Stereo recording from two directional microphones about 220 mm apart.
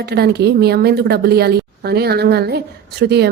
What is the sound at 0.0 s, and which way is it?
A woman's voice, 45° right (ahead or behind).